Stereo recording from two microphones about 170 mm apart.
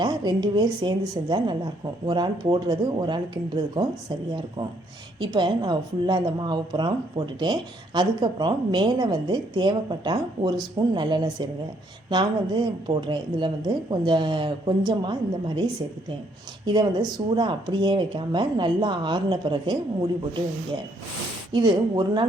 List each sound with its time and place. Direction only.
0.0 s a woman's voice: 25° right (ahead or behind)
5.2 s a woman's voice: 25° right (ahead or behind)
16.6 s a woman's voice: 25° right (ahead or behind)